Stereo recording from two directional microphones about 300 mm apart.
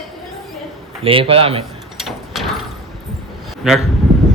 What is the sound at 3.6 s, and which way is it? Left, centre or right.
Speech, centre.